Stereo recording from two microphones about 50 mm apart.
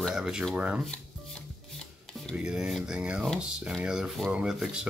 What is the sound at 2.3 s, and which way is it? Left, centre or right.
Speech, centre.